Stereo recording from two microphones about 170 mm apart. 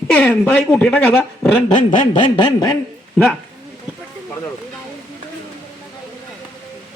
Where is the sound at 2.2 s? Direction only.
25° left (ahead or behind).